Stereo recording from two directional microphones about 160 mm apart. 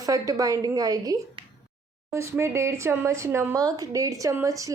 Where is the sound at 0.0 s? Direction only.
20° right (ahead or behind).